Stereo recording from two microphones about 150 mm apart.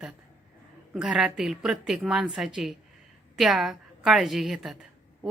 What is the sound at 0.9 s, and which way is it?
A woman's voice, 5° right (ahead or behind).